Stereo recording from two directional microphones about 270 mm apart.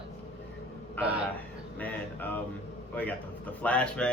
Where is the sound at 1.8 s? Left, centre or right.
Centre.